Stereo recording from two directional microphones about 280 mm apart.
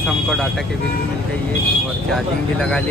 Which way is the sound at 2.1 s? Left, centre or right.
Centre.